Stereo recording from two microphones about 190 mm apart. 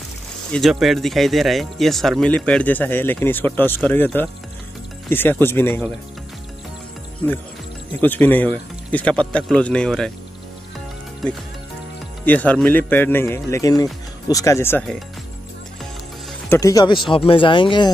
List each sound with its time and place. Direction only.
0.5 s speech: centre (ahead or behind)
8.0 s speech: 10° left (ahead or behind)
12.3 s speech: 10° left (ahead or behind)
16.4 s speech: 15° left (ahead or behind)